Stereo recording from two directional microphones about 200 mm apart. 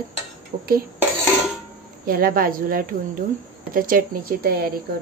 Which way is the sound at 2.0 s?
45° right (ahead or behind).